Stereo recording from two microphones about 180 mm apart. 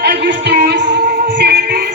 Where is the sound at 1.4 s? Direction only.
60° right (ahead or behind).